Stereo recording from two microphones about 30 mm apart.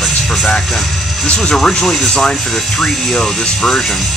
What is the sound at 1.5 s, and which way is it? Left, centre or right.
Speech, left.